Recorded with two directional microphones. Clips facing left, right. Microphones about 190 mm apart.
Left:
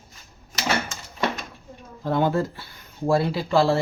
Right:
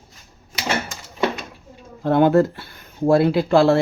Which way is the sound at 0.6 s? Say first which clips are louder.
Right 1 dB; 10° right (ahead or behind).